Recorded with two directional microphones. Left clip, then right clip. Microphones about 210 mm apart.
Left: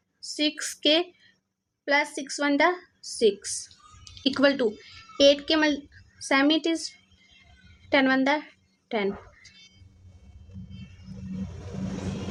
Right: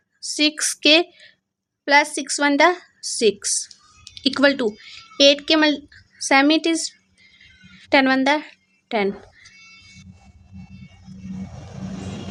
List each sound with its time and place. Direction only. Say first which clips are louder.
0.3 s a woman's voice: right 7 dB; 25° right (ahead or behind)